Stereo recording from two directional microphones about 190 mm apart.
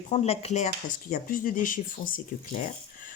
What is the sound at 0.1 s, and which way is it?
Speech, 35° left (ahead or behind).